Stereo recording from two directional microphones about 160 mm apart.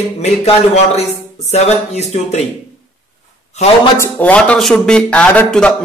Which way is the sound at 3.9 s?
10° left (ahead or behind).